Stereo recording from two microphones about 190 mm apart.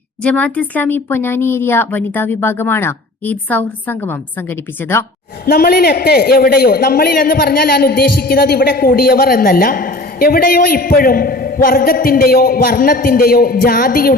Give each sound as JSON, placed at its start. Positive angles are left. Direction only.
{"t": 0.2, "sound": "speech", "side_deg": 5}
{"t": 5.5, "sound": "a man's voice", "side_deg": 50}